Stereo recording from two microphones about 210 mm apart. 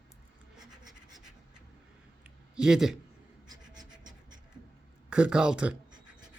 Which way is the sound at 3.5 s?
20° right (ahead or behind).